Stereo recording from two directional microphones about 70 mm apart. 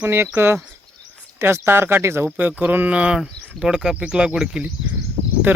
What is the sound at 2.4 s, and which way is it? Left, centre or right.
Speech, right.